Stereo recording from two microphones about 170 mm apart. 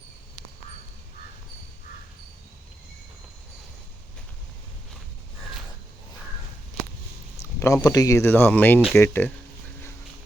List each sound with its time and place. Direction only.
7.6 s speech: 20° left (ahead or behind)